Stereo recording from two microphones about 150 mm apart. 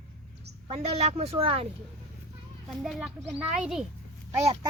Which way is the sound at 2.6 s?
Centre (ahead or behind).